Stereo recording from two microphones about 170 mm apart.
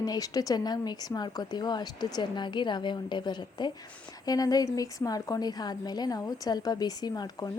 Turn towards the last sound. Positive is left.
turn(degrees=25)  # may be behind; listen again after turning